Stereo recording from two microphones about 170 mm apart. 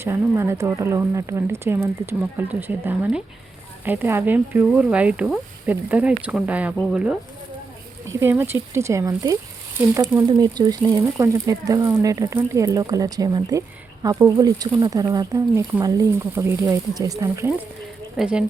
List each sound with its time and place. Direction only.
0.0 s speech: 15° right (ahead or behind)
18.2 s speech: 5° right (ahead or behind)